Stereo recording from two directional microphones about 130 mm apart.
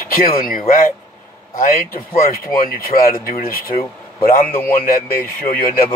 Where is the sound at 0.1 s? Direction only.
90° left.